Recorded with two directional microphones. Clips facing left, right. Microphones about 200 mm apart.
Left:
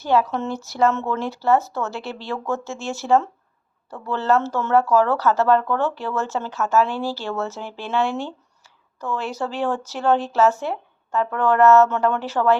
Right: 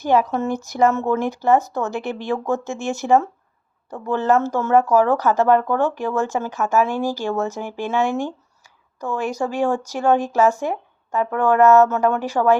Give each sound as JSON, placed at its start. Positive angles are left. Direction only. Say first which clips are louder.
{"t": 0.0, "sound": "speech", "louder": "right 2 dB", "side_deg": -15}